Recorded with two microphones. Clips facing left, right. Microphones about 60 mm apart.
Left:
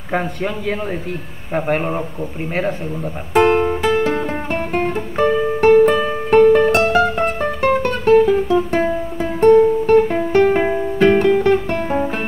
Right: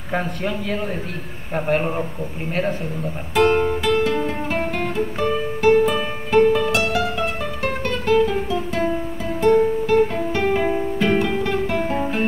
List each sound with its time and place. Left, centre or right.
1.8 s speech: centre
3.3 s speech: left
3.9 s music: left